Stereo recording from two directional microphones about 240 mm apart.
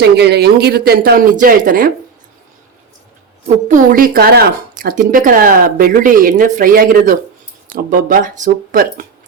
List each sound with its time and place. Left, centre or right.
0.0 s a woman's voice: right
3.4 s a woman's voice: right